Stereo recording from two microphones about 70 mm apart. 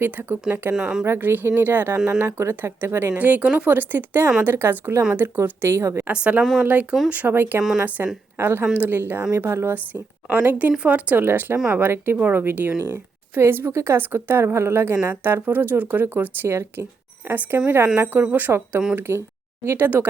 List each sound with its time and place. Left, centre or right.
0.0 s speech: right
2.0 s speech: right
6.1 s speech: centre
13.7 s a woman's voice: right
13.9 s speech: right